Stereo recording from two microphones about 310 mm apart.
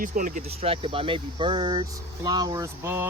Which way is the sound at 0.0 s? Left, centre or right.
Right.